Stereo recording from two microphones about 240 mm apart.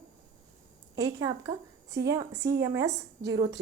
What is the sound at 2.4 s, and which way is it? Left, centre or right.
Speech, right.